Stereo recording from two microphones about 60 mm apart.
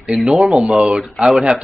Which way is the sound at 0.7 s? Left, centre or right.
Centre.